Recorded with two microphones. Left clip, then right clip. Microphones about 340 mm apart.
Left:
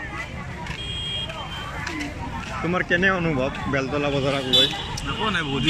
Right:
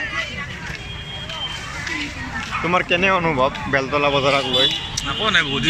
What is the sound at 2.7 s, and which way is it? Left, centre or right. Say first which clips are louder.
Speech: right 5 dB; centre.